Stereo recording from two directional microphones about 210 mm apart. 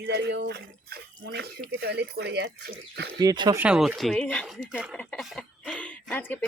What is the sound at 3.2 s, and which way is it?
Speech, 20° right (ahead or behind).